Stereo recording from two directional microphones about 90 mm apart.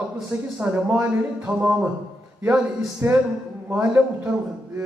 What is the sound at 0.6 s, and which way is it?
Speech, 15° right (ahead or behind).